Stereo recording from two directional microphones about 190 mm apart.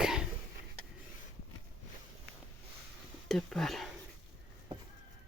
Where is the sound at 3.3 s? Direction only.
5° left (ahead or behind).